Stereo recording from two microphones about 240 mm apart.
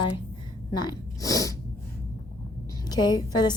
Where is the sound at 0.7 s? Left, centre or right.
Centre.